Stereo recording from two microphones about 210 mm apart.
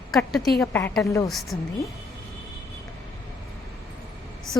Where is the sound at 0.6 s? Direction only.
10° left (ahead or behind).